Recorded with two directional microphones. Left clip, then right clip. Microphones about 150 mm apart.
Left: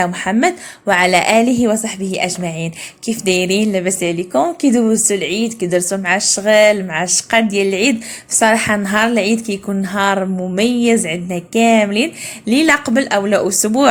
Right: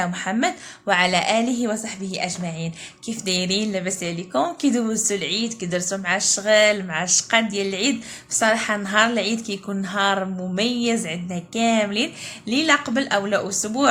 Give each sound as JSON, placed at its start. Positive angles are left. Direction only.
{"t": 0.0, "sound": "a woman's voice", "side_deg": 35}